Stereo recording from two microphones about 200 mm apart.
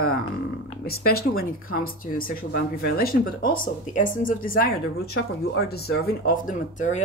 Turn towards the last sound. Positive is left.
turn(degrees=40)  # may be behind; listen again after turning